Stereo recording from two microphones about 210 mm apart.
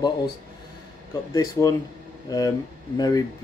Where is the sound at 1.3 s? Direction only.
15° left (ahead or behind).